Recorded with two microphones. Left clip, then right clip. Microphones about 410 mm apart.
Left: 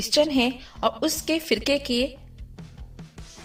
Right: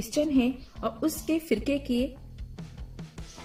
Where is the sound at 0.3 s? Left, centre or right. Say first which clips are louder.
Left 3 dB; left.